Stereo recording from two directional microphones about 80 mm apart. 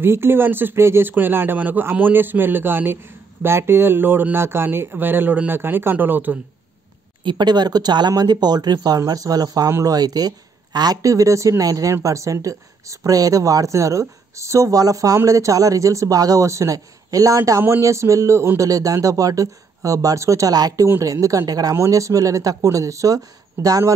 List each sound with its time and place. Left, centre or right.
0.0 s speech: right
7.2 s speech: right
9.9 s speech: right